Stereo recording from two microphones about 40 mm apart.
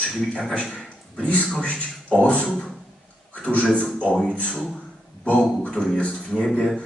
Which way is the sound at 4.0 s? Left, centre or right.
Left.